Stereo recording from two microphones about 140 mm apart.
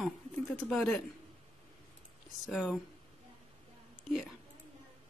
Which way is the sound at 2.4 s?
Centre (ahead or behind).